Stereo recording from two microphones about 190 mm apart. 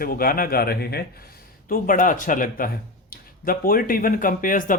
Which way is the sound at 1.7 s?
45° left (ahead or behind).